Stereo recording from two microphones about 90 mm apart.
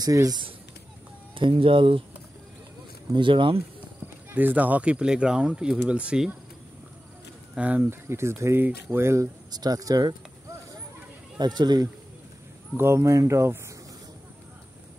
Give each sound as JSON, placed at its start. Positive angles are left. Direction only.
{"t": 0.0, "sound": "speech", "side_deg": -45}
{"t": 1.3, "sound": "speech", "side_deg": -75}
{"t": 3.2, "sound": "speech", "side_deg": -70}
{"t": 4.3, "sound": "speech", "side_deg": -20}
{"t": 7.5, "sound": "speech", "side_deg": -15}
{"t": 8.6, "sound": "speech", "side_deg": -20}
{"t": 9.0, "sound": "speech", "side_deg": -30}
{"t": 9.5, "sound": "speech", "side_deg": -50}
{"t": 11.3, "sound": "speech", "side_deg": -50}
{"t": 12.7, "sound": "speech", "side_deg": -30}